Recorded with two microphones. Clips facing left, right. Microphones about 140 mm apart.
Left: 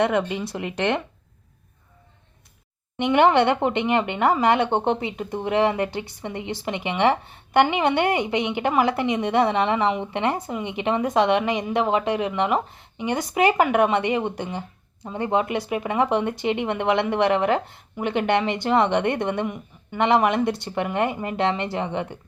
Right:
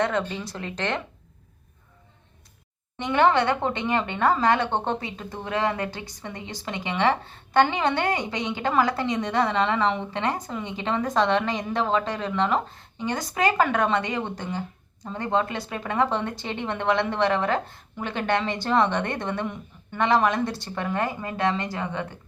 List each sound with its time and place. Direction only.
0.0 s a woman's voice: 15° left (ahead or behind)
3.0 s a woman's voice: 20° left (ahead or behind)